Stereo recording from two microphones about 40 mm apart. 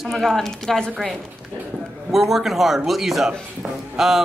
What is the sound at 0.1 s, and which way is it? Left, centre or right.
Speech, centre.